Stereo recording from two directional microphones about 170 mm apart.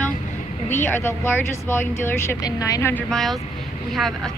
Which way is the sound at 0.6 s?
10° left (ahead or behind).